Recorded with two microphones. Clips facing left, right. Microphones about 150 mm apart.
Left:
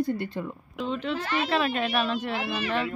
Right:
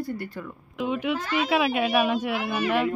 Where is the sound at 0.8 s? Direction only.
10° right (ahead or behind).